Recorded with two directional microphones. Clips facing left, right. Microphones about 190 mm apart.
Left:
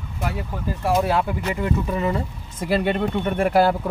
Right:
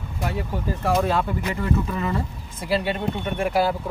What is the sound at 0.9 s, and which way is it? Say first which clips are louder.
Speech: left 2 dB; 10° left (ahead or behind).